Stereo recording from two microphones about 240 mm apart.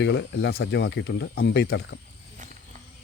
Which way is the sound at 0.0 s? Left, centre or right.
Left.